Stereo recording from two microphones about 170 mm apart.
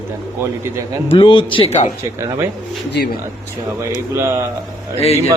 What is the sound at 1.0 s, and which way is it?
Speech, 30° left (ahead or behind).